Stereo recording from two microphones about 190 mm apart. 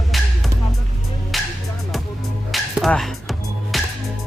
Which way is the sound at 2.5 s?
Centre (ahead or behind).